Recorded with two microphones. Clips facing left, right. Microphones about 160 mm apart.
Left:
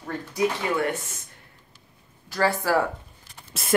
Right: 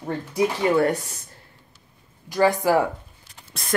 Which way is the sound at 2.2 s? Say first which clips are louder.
Right 4 dB; 15° right (ahead or behind).